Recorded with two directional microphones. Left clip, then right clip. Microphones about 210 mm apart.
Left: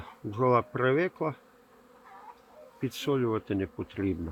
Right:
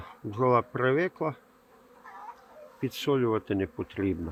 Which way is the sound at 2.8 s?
15° right (ahead or behind).